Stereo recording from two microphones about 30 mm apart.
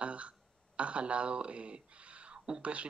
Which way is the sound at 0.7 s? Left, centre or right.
Right.